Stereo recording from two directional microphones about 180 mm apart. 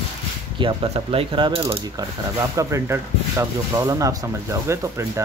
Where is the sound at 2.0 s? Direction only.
15° right (ahead or behind).